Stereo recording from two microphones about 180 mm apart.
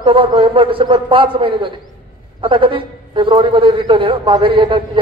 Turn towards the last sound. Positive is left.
turn(degrees=-30)  # may be behind; listen again after turning